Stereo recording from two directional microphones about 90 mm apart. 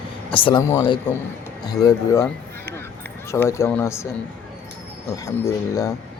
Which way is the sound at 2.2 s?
25° left (ahead or behind).